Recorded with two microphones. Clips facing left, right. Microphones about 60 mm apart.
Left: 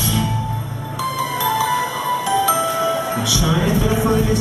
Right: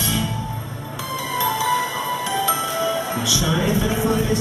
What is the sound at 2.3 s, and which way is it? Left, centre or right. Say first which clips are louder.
Music: left 5 dB; centre.